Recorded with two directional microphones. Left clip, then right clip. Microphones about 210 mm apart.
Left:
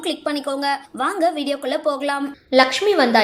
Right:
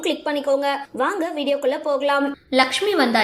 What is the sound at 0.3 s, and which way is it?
Speech, 30° left (ahead or behind).